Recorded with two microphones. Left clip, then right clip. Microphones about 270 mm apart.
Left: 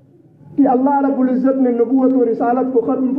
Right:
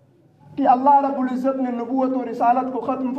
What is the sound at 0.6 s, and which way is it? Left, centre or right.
Speech, centre.